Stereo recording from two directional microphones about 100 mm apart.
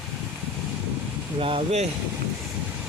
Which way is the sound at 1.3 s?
65° right (ahead or behind).